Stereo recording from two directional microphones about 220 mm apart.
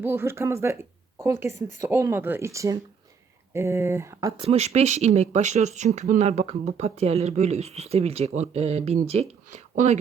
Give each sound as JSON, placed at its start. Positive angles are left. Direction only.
{"t": 0.0, "sound": "speech", "side_deg": -10}
{"t": 4.4, "sound": "speech", "side_deg": -30}